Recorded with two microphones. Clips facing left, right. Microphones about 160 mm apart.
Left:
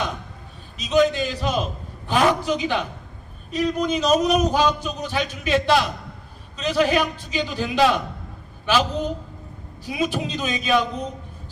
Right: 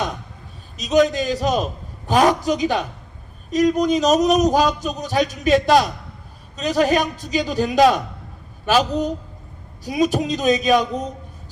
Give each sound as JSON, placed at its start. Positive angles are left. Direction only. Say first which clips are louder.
{"t": 0.8, "sound": "a man's voice", "louder": "right 2 dB", "side_deg": -40}